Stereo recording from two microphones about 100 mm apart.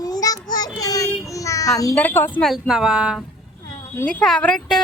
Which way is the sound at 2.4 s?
5° right (ahead or behind).